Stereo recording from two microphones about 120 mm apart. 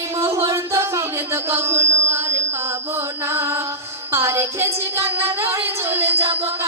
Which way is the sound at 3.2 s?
20° right (ahead or behind).